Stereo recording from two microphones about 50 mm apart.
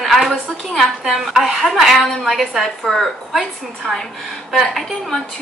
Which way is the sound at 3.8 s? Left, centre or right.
Centre.